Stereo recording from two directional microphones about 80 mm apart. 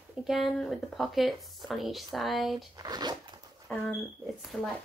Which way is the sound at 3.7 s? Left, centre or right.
Centre.